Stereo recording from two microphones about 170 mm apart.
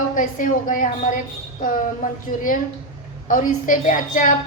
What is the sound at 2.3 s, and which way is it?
A woman's voice, 55° left (ahead or behind).